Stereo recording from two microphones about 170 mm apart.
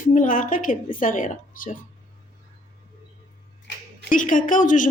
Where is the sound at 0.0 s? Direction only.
50° left (ahead or behind).